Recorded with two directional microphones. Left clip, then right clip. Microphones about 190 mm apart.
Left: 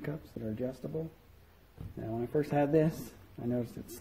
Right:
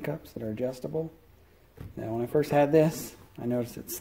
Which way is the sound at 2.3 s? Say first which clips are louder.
Right 6 dB; 10° right (ahead or behind).